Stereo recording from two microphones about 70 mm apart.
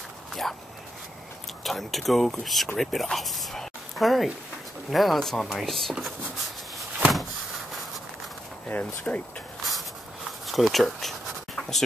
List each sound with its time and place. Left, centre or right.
0.3 s speech: centre
1.6 s speech: centre
8.6 s speech: left
10.4 s a sound: centre